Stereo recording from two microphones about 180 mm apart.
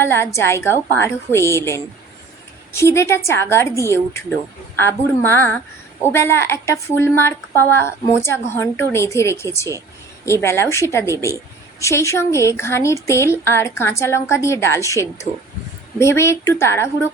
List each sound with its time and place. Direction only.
0.0 s a woman's voice: 15° left (ahead or behind)